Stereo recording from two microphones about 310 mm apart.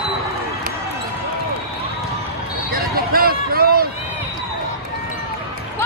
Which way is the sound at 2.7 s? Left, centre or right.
Right.